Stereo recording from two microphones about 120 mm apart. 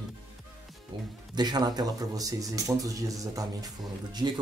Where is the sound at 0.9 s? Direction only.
40° right (ahead or behind).